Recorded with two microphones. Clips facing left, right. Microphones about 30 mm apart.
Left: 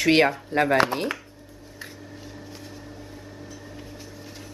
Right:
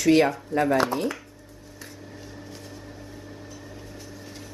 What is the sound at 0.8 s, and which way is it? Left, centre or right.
Speech, left.